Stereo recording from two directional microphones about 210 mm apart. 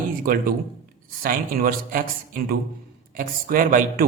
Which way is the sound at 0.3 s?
40° right (ahead or behind).